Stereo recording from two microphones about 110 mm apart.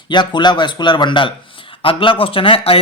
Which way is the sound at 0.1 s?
45° left (ahead or behind).